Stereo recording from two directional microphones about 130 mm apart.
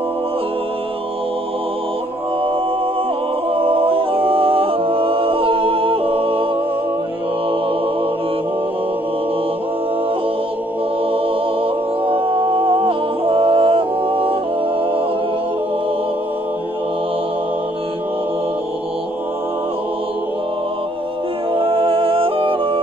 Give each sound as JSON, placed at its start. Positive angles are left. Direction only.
{"t": 3.5, "sound": "music", "side_deg": -45}
{"t": 11.6, "sound": "music", "side_deg": -45}
{"t": 21.5, "sound": "music", "side_deg": -45}